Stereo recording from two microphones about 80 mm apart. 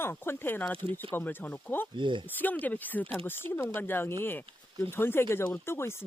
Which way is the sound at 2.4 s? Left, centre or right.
Left.